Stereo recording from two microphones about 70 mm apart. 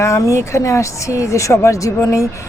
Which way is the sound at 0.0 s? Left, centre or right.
Left.